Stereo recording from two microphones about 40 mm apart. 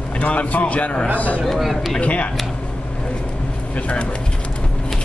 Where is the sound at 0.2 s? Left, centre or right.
Left.